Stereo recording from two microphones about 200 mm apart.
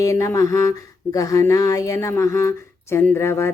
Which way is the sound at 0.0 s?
15° left (ahead or behind).